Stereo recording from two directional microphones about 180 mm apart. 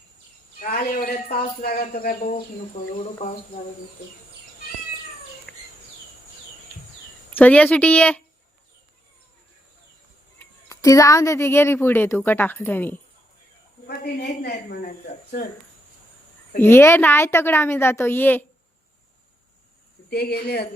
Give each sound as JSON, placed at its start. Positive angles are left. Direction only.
{"t": 0.6, "sound": "speech", "side_deg": 55}
{"t": 5.5, "sound": "bird", "side_deg": 5}
{"t": 7.3, "sound": "a woman's voice", "side_deg": 10}
{"t": 10.3, "sound": "a woman's voice", "side_deg": 15}
{"t": 13.8, "sound": "a woman's voice", "side_deg": 65}
{"t": 16.6, "sound": "a woman's voice", "side_deg": 15}
{"t": 20.1, "sound": "speech", "side_deg": 60}